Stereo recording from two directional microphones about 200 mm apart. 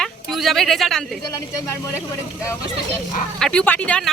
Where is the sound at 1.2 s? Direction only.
15° left (ahead or behind).